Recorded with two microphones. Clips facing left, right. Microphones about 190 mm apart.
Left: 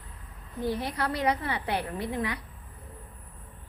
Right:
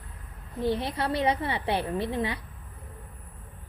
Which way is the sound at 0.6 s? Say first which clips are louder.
Right 2 dB; 25° right (ahead or behind).